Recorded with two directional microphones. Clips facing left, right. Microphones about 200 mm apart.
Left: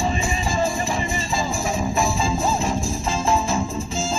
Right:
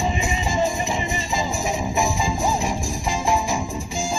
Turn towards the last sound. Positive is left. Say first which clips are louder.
# left 1 dB
turn(degrees=-15)  # may be behind; listen again after turning